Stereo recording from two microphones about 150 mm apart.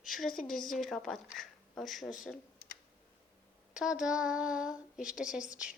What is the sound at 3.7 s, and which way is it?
A woman's voice, 5° right (ahead or behind).